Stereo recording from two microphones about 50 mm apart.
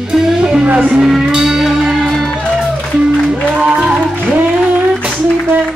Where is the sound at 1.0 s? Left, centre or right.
Centre.